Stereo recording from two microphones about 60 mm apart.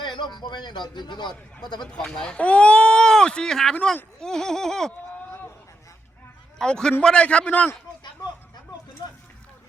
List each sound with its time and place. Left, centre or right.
2.0 s speech: centre
2.4 s speech: left
6.6 s speech: centre